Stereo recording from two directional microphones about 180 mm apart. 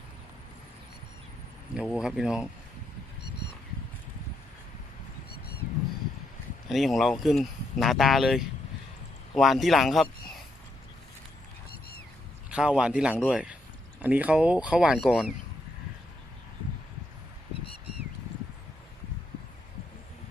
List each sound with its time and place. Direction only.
1.7 s speech: 5° right (ahead or behind)
3.2 s a sound: 65° left (ahead or behind)
6.7 s speech: centre (ahead or behind)
12.5 s speech: 5° right (ahead or behind)